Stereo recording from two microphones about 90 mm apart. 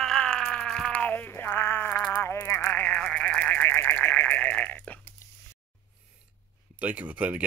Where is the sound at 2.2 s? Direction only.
30° left (ahead or behind).